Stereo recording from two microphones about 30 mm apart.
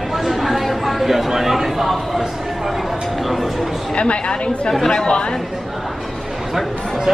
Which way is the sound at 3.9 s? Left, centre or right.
Left.